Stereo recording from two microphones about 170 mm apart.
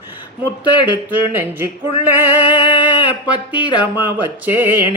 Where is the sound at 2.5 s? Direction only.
30° left (ahead or behind).